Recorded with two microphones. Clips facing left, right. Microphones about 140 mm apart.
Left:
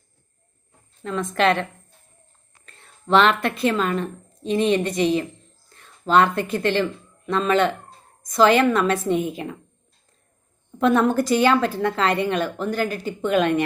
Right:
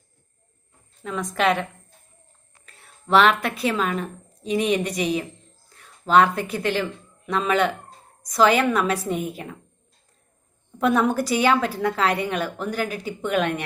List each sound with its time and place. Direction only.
1.0 s a woman's voice: 5° right (ahead or behind)
2.6 s a woman's voice: 5° right (ahead or behind)
10.8 s a woman's voice: 5° right (ahead or behind)